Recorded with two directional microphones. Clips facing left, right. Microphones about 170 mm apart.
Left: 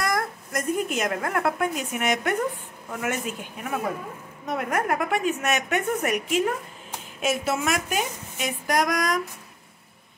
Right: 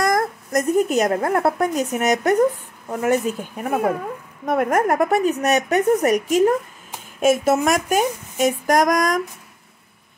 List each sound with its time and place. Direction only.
0.0 s a woman's voice: 45° right (ahead or behind)